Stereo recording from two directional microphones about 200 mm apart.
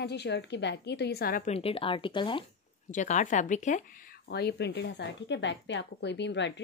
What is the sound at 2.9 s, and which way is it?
Speech, 40° left (ahead or behind).